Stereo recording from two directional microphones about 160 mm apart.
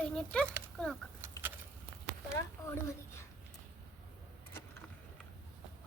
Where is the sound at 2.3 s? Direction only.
20° left (ahead or behind).